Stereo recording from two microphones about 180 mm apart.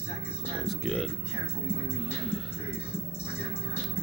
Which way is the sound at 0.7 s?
Centre (ahead or behind).